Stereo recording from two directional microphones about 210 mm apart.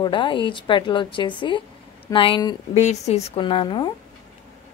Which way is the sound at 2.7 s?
30° left (ahead or behind).